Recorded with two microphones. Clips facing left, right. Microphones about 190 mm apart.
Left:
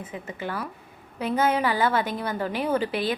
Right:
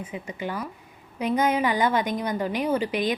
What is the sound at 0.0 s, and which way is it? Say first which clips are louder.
A woman's voice: right 1 dB; 10° right (ahead or behind).